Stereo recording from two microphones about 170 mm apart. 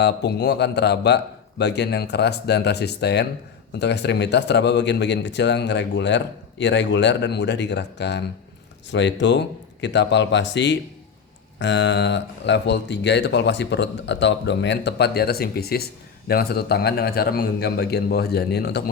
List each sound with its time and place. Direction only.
0.0 s a man's voice: 80° left
3.8 s speech: 90° left; by 18.8 s 70° left (ahead or behind)